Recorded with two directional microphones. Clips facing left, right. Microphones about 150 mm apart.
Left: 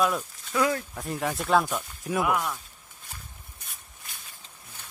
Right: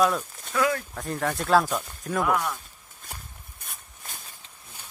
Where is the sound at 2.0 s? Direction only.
10° left (ahead or behind).